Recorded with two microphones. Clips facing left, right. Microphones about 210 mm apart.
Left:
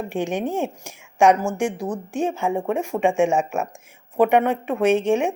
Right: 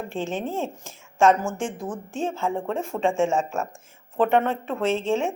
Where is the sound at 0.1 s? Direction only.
15° left (ahead or behind).